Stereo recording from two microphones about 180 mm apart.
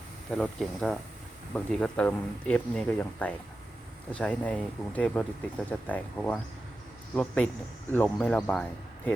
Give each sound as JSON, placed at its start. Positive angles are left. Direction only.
{"t": 0.3, "sound": "speech", "side_deg": 0}